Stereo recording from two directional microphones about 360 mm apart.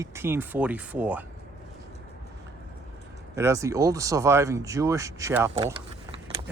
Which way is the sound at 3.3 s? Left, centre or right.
Centre.